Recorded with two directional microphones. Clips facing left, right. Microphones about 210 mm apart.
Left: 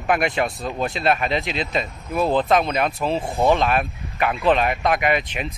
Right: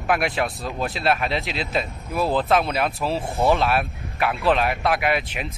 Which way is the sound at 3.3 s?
15° left (ahead or behind).